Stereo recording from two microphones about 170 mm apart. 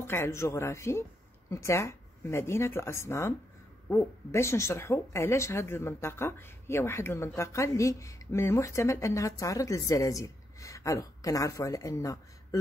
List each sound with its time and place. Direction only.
0.0 s speech: 15° left (ahead or behind)